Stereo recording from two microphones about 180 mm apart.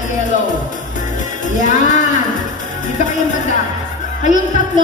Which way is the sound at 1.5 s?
45° left (ahead or behind).